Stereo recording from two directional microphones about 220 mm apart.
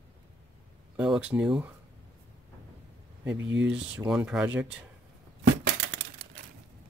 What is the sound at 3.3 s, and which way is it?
Speech, 55° right (ahead or behind).